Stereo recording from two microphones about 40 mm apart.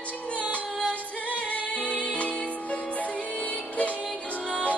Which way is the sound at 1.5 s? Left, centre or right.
Left.